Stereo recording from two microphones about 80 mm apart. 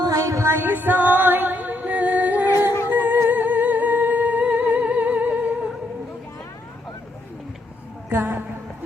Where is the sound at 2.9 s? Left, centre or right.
Right.